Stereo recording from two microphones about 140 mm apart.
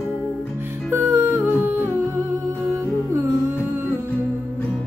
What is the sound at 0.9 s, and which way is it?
Music, 20° right (ahead or behind).